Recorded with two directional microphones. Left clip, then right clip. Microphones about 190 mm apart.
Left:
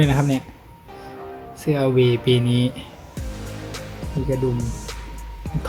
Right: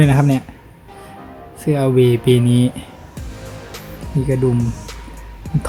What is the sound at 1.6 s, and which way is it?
Speech, 15° right (ahead or behind).